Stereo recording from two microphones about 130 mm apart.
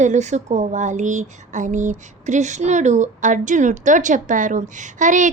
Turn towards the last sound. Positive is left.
turn(degrees=-75)  # may be behind; listen again after turning